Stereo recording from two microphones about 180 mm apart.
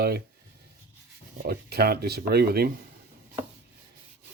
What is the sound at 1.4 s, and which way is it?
Speech, 60° right (ahead or behind).